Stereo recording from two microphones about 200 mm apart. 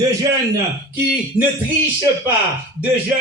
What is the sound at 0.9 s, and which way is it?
Speech, 10° right (ahead or behind).